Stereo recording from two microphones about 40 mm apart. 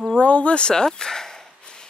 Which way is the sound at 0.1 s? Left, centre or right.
Left.